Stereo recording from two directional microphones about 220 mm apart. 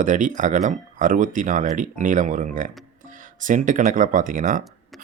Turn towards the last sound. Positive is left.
turn(degrees=-35)  # may be behind; listen again after turning